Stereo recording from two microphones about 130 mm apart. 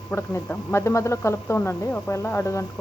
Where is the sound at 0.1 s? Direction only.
20° left (ahead or behind).